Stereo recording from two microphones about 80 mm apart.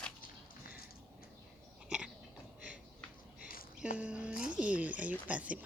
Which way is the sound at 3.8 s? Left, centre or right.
Centre.